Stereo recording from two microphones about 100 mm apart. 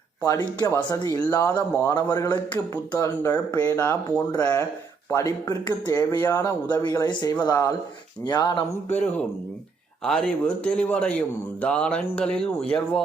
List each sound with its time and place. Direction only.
0.2 s speech: 40° left (ahead or behind); by 1.9 s 20° left (ahead or behind)
1.9 s speech: 40° left (ahead or behind)
4.3 s speech: 35° left (ahead or behind)
10.0 s speech: 5° left (ahead or behind)